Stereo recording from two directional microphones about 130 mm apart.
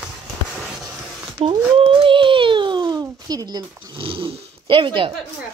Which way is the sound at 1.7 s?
45° right (ahead or behind).